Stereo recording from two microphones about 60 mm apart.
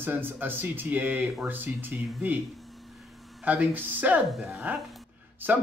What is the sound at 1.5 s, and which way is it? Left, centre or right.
Speech, right.